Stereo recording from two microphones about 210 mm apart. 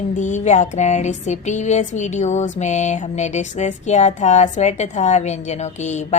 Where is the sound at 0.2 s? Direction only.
35° left (ahead or behind).